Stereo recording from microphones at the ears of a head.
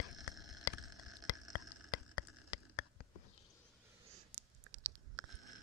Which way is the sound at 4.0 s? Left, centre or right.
Right.